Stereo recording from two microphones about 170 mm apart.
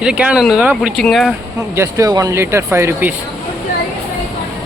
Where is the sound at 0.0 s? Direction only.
5° right (ahead or behind).